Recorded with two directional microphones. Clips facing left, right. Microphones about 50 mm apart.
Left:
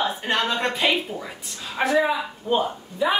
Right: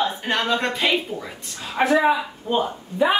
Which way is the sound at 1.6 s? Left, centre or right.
Centre.